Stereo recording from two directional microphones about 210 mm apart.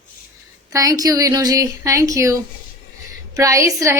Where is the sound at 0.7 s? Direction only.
15° right (ahead or behind).